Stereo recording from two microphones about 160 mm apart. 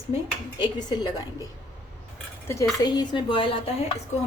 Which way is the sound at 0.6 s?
25° left (ahead or behind).